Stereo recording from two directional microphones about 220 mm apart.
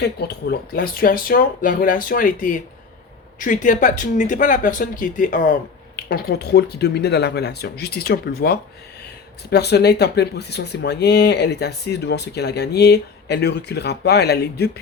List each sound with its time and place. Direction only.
0.0 s speech: 50° left (ahead or behind)